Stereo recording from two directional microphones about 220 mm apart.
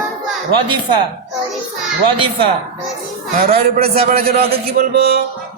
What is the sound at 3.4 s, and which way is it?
A man's voice, 45° right (ahead or behind).